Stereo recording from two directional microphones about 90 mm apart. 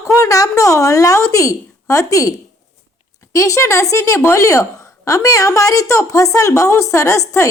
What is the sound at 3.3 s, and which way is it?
Speech, 35° left (ahead or behind).